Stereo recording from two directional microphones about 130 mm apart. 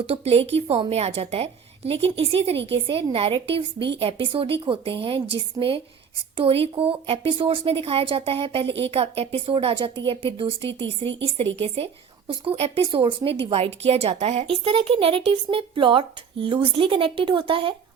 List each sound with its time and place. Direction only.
0.0 s a woman's voice: 50° right (ahead or behind)